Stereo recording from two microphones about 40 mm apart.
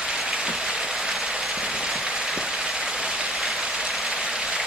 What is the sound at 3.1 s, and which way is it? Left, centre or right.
Vehicle, centre.